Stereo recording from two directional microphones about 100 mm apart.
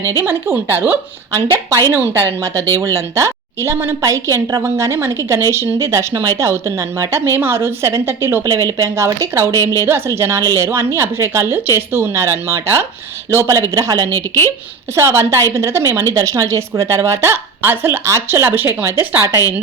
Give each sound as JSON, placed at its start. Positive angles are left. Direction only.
{"t": 0.1, "sound": "a woman's voice", "side_deg": -25}
{"t": 14.1, "sound": "speech", "side_deg": 25}
{"t": 14.9, "sound": "speech", "side_deg": -25}